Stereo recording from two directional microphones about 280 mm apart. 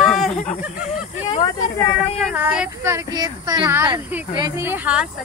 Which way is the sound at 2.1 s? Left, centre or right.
Centre.